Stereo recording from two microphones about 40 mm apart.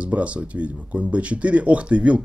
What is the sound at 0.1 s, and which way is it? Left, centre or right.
Speech, right.